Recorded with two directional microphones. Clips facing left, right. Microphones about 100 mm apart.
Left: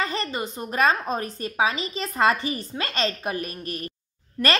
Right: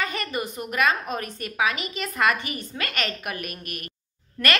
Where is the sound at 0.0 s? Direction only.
30° left (ahead or behind).